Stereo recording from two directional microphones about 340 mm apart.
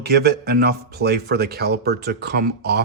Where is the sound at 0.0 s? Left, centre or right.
Right.